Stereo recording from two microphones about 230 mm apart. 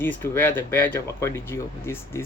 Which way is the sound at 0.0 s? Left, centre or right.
Centre.